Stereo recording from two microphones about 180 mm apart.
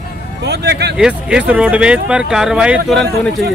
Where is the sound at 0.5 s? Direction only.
70° right (ahead or behind).